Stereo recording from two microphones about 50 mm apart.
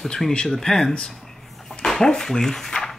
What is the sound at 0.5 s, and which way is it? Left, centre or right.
Speech, centre.